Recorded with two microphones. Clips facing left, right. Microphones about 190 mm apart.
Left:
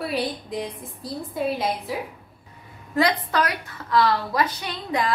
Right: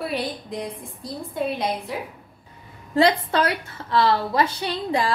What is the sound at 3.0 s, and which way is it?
A woman's voice, 25° right (ahead or behind).